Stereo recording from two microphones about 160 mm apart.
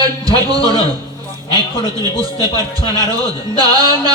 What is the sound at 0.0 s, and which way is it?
A man's voice, 25° right (ahead or behind).